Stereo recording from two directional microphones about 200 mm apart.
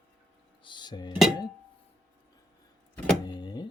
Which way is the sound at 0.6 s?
25° left (ahead or behind).